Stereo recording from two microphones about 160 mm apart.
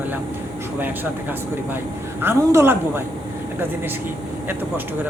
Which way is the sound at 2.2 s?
15° right (ahead or behind).